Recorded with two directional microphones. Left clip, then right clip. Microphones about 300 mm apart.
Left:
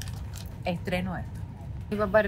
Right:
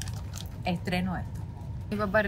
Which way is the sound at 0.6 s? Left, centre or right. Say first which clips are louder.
Left 1 dB; centre.